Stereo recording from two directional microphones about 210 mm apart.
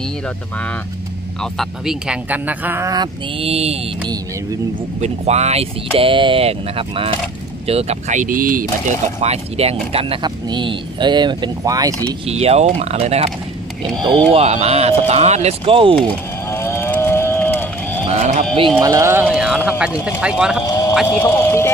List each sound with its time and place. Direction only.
1.4 s speech: centre (ahead or behind); by 3.8 s 30° right (ahead or behind)
5.0 s speech: 30° right (ahead or behind)
12.3 s speech: 30° right (ahead or behind)
14.3 s speech: 30° right (ahead or behind)
16.4 s moo: 10° left (ahead or behind)
18.0 s a sound: 30° right (ahead or behind)
18.8 s speech: 15° right (ahead or behind)
20.6 s clip-clop: 20° left (ahead or behind)
21.1 s speech: 10° left (ahead or behind)